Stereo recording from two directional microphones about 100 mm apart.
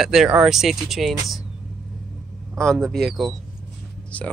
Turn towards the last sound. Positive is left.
turn(degrees=15)  # may be behind; listen again after turning